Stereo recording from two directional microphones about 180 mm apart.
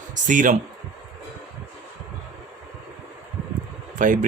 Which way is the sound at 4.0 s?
45° right (ahead or behind).